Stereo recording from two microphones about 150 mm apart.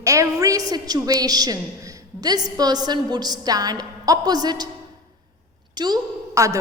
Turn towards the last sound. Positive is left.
turn(degrees=-20)  # may be behind; listen again after turning